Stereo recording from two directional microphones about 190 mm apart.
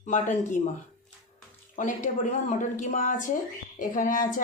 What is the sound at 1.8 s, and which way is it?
A woman's voice, 40° left (ahead or behind).